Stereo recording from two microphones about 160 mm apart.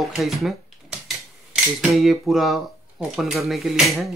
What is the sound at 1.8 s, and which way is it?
Speech, centre (ahead or behind).